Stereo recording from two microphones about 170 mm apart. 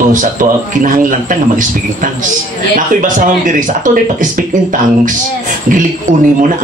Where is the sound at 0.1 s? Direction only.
50° right (ahead or behind).